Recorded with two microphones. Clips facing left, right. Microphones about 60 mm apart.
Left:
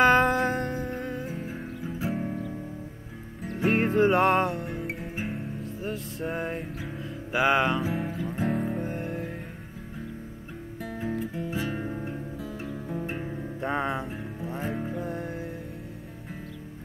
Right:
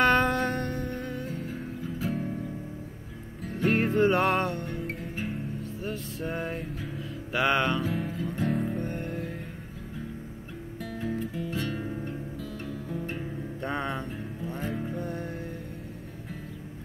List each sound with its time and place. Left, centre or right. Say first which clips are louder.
0.0 s music: left 3 dB; centre
3.4 s music: left 1 dB; centre
10.8 s music: left 1 dB; centre
13.6 s music: left 3 dB; centre